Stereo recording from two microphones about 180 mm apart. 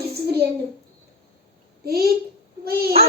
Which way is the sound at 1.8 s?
60° right (ahead or behind).